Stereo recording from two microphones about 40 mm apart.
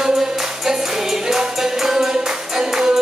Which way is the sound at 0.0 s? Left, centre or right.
Centre.